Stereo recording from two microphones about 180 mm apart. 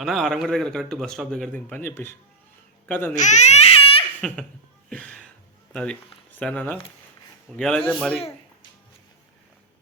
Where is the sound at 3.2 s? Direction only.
40° left (ahead or behind).